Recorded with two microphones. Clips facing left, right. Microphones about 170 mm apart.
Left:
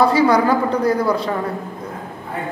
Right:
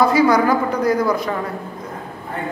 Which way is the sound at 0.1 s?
30° left (ahead or behind).